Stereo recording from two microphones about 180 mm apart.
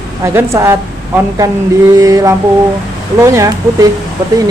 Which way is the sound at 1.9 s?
20° right (ahead or behind).